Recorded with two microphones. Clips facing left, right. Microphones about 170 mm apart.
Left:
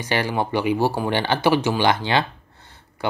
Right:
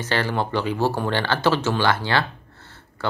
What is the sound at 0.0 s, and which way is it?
Speech, 15° left (ahead or behind).